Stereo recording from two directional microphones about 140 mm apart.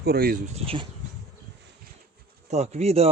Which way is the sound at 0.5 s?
40° right (ahead or behind).